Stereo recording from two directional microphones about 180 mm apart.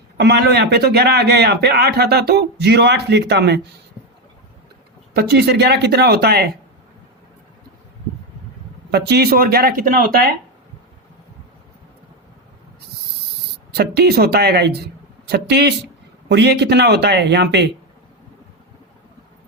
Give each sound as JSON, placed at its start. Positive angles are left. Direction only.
{"t": 0.2, "sound": "a man's voice", "side_deg": -65}
{"t": 5.1, "sound": "a man's voice", "side_deg": -65}
{"t": 8.9, "sound": "a man's voice", "side_deg": -65}
{"t": 13.7, "sound": "a man's voice", "side_deg": -60}